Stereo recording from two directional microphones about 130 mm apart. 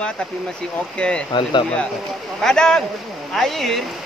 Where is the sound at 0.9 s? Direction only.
10° left (ahead or behind).